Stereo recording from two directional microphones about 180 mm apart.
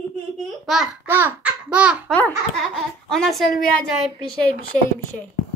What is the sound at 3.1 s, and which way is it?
Speech, centre (ahead or behind).